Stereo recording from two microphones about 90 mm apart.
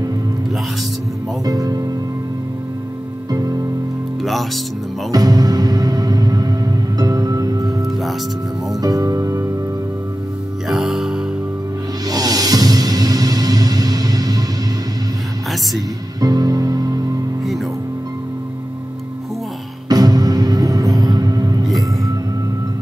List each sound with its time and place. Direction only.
1.4 s speech: 40° right (ahead or behind)
3.3 s music: 45° right (ahead or behind)
4.2 s speech: centre (ahead or behind)
5.1 s music: 45° right (ahead or behind)
8.8 s music: 40° right (ahead or behind)
10.7 s music: 5° right (ahead or behind)
12.1 s music: 45° right (ahead or behind)
16.2 s music: 45° right (ahead or behind)
19.9 s music: 45° right (ahead or behind)